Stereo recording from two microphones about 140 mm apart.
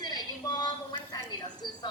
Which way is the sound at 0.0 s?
30° left (ahead or behind).